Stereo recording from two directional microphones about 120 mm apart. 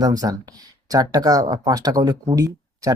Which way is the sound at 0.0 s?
30° right (ahead or behind).